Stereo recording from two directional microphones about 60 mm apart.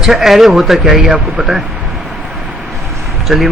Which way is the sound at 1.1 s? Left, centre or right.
Right.